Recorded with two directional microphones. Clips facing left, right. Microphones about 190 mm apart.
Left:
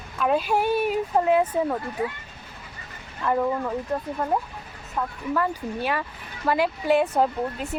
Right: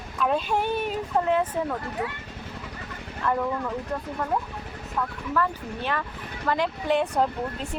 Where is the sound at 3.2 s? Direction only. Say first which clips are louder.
Left 2 dB; 15° left (ahead or behind).